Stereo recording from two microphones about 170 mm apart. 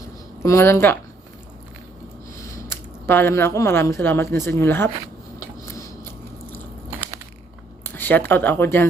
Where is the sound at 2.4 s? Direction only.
15° left (ahead or behind).